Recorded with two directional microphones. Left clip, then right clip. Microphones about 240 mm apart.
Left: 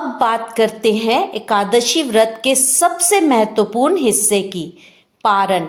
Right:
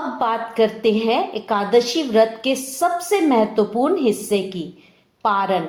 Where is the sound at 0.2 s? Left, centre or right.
Left.